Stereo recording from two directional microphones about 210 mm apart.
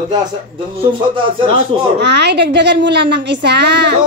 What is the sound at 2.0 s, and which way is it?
A woman's voice, 55° right (ahead or behind).